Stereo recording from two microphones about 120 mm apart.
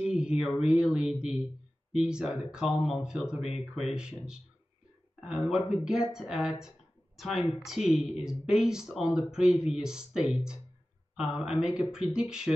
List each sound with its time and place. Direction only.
0.0 s speech: 5° right (ahead or behind)